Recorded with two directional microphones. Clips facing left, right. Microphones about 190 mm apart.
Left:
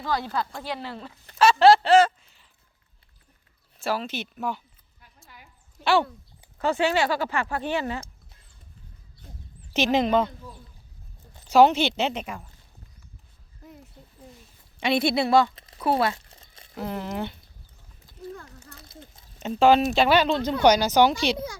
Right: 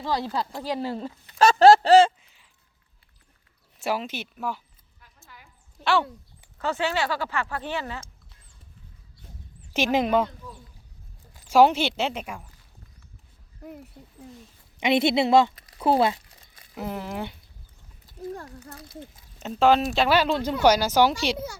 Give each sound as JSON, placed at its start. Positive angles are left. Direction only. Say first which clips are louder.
{"t": 0.0, "sound": "speech", "louder": "right 1 dB", "side_deg": -30}
{"t": 3.8, "sound": "a woman's voice", "louder": "even", "side_deg": -20}
{"t": 5.8, "sound": "speech", "louder": "left 2 dB", "side_deg": 5}
{"t": 9.7, "sound": "a woman's voice", "louder": "left 1 dB", "side_deg": -10}
{"t": 11.5, "sound": "a woman's voice", "louder": "left 1 dB", "side_deg": -10}
{"t": 14.8, "sound": "speech", "louder": "right 2 dB", "side_deg": -20}
{"t": 15.5, "sound": "a sound", "louder": "left 3 dB", "side_deg": 25}
{"t": 15.8, "sound": "speech", "louder": "right 2 dB", "side_deg": -25}
{"t": 16.3, "sound": "a sound", "louder": "left 3 dB", "side_deg": 25}
{"t": 16.7, "sound": "a woman's voice", "louder": "left 1 dB", "side_deg": -10}
{"t": 18.3, "sound": "speech", "louder": "right 5 dB", "side_deg": -40}
{"t": 19.4, "sound": "speech", "louder": "left 2 dB", "side_deg": 0}